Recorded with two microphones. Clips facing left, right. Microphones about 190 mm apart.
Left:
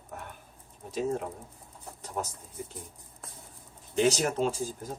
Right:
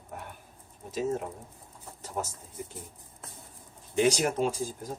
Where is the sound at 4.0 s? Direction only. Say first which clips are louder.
Even; 10° right (ahead or behind).